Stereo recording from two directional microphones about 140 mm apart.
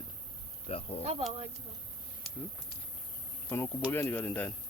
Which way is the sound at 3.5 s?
15° left (ahead or behind).